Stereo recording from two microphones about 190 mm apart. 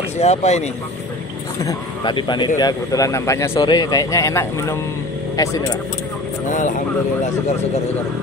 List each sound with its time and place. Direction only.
0.2 s speech: 35° left (ahead or behind)
1.6 s speech: 20° left (ahead or behind)
6.5 s speech: 40° left (ahead or behind)